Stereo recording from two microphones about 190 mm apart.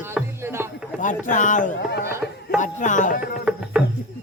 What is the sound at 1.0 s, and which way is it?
Speech, 40° left (ahead or behind).